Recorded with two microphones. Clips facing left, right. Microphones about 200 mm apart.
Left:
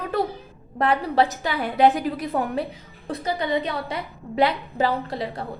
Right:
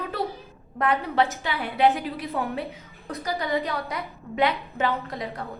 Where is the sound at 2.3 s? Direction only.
30° left (ahead or behind).